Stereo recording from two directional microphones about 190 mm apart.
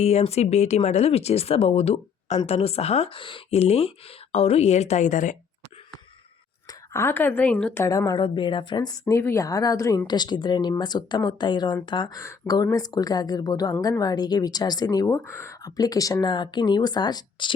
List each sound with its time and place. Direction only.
0.0 s speech: 35° left (ahead or behind)
6.9 s a woman's voice: 10° left (ahead or behind)